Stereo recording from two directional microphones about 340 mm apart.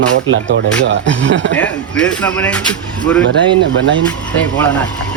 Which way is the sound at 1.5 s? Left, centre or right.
Centre.